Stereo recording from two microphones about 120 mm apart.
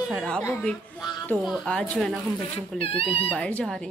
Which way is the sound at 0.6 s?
5° left (ahead or behind).